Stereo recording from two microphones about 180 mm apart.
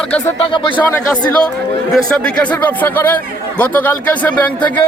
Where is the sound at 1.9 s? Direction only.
5° left (ahead or behind).